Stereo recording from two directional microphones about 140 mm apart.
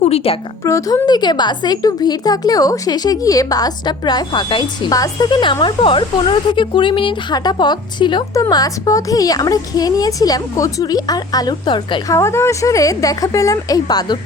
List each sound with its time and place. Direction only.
0.0 s a sound: 45° left (ahead or behind)
0.6 s a woman's voice: 20° left (ahead or behind)
12.1 s speech: 20° left (ahead or behind)